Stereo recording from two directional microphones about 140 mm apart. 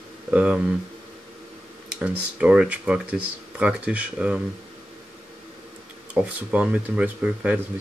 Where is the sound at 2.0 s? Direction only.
10° right (ahead or behind).